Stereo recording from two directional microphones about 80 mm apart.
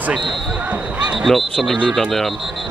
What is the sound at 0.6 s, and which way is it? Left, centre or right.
Speech, centre.